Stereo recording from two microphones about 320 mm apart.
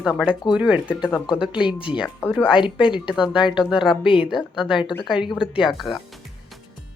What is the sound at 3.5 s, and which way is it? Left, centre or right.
Speech, centre.